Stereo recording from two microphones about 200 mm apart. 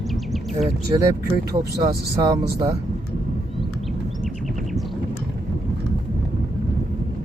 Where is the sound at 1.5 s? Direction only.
20° right (ahead or behind).